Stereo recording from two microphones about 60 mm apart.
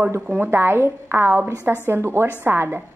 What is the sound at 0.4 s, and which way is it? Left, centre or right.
A woman's voice, right.